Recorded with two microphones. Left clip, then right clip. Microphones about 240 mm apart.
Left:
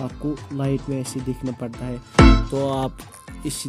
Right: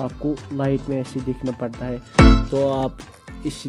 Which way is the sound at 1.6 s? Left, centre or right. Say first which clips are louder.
Right 4 dB; left.